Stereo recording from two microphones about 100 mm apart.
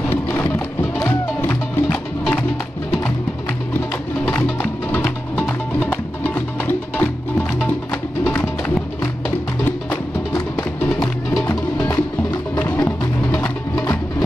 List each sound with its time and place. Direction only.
0.1 s music: 20° left (ahead or behind)
4.3 s music: 15° left (ahead or behind)
8.3 s music: 15° left (ahead or behind)
9.8 s music: 35° left (ahead or behind)
11.4 s music: 20° left (ahead or behind)